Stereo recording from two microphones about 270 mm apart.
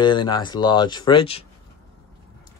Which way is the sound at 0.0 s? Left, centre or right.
Centre.